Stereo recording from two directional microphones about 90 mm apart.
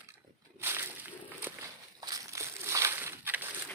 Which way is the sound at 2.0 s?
40° right (ahead or behind).